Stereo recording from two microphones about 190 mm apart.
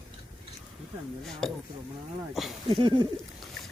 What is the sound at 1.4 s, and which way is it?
Speech, 5° left (ahead or behind).